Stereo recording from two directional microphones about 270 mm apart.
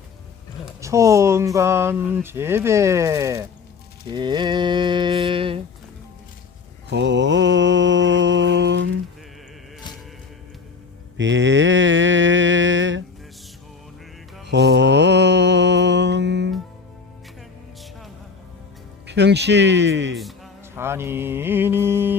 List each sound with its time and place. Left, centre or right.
0.6 s speech: centre
6.9 s mantra: right
11.2 s a sound: right
14.4 s mantra: right
19.0 s a sound: right
20.1 s mantra: centre